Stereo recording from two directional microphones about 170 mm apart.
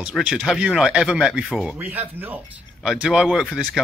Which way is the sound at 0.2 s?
Centre (ahead or behind).